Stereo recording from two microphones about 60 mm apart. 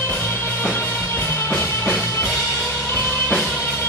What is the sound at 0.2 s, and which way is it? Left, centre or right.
Music, left.